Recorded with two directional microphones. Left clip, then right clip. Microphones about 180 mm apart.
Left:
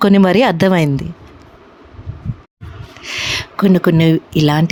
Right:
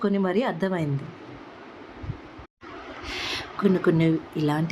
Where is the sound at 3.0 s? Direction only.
50° left (ahead or behind).